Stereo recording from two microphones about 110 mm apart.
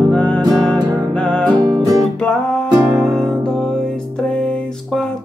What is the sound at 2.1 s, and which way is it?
Music, 10° left (ahead or behind).